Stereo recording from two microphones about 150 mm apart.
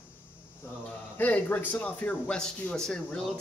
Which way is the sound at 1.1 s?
10° left (ahead or behind).